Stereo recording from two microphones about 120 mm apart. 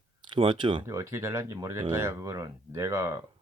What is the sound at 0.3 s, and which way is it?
Speech, 45° right (ahead or behind).